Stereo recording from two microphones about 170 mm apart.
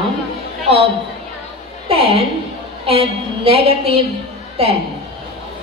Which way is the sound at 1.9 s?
35° right (ahead or behind).